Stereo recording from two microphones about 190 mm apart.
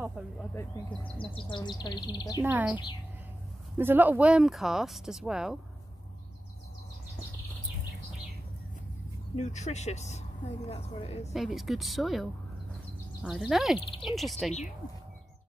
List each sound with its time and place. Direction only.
0.0 s speech: 5° right (ahead or behind)
1.2 s speech: 25° left (ahead or behind)
2.4 s speech: 10° right (ahead or behind)
9.4 s speech: 40° left (ahead or behind)
11.3 s speech: centre (ahead or behind)
13.7 s speech: 30° left (ahead or behind)
14.0 s speech: centre (ahead or behind)